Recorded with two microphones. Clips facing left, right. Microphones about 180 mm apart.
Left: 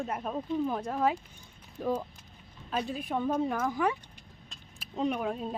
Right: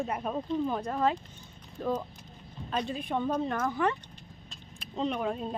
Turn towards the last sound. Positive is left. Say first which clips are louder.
# even
turn(degrees=0)  # may be behind; listen again after turning